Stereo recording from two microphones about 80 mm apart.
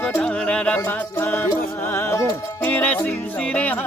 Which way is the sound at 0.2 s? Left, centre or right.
Centre.